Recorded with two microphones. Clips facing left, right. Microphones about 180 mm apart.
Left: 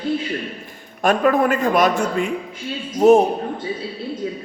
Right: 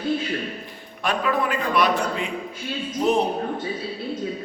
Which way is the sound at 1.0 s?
45° left (ahead or behind).